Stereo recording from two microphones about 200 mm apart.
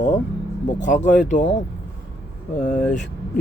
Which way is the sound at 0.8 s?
40° left (ahead or behind).